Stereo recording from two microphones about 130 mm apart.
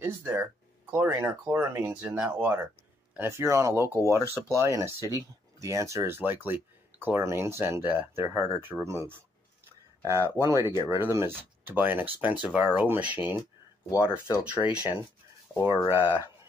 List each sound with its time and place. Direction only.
0.0 s speech: 15° right (ahead or behind)
4.2 s speech: 25° left (ahead or behind)
4.6 s speech: 20° right (ahead or behind)
10.4 s speech: 20° right (ahead or behind)
13.8 s speech: 25° left (ahead or behind)
14.4 s speech: 10° right (ahead or behind)